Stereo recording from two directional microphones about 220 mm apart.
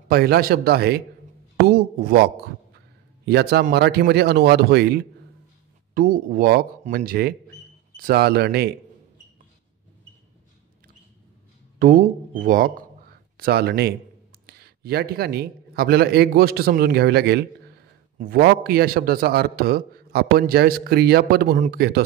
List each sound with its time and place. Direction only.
0.1 s a man's voice: 45° right (ahead or behind)
3.3 s a man's voice: 45° right (ahead or behind)
11.8 s a man's voice: 35° right (ahead or behind)